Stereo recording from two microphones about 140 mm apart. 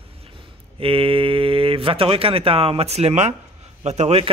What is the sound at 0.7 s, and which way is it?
Speech, 40° right (ahead or behind).